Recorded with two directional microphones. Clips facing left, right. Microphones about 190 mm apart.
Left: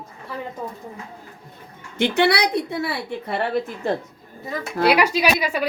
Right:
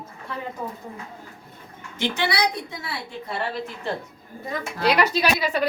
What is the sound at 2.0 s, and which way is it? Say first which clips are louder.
A woman's voice: left 6 dB; 65° left (ahead or behind).